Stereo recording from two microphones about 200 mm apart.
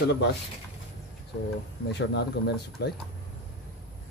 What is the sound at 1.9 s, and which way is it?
A man's voice, 55° left (ahead or behind).